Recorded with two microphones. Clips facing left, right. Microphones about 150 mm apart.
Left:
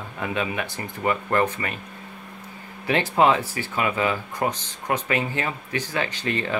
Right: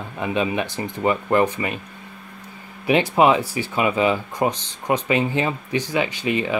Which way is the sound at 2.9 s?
15° right (ahead or behind).